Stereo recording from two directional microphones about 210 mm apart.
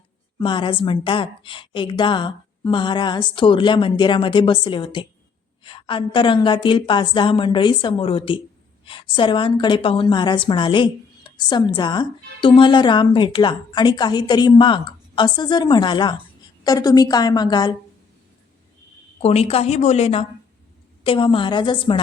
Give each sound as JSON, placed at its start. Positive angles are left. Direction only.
{"t": 0.3, "sound": "a woman's voice", "side_deg": 20}
{"t": 19.2, "sound": "a woman's voice", "side_deg": 30}